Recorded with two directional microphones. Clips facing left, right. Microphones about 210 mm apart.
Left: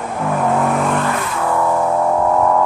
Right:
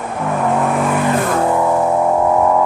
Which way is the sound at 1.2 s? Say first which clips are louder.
Right 6 dB; 50° right (ahead or behind).